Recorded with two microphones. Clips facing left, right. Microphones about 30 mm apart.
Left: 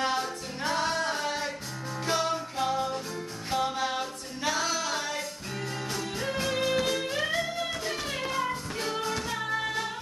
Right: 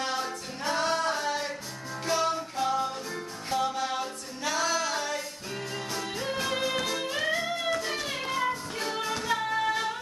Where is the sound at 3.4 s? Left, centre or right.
Centre.